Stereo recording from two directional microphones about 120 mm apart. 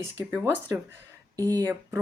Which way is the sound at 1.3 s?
20° left (ahead or behind).